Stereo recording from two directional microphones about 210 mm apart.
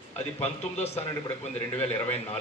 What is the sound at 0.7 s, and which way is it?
Speech, 30° left (ahead or behind).